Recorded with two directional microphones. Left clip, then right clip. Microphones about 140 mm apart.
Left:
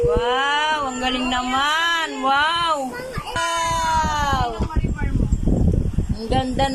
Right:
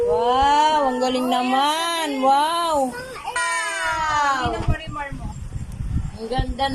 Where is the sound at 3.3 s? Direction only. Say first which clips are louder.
Left 2 dB; 20° left (ahead or behind).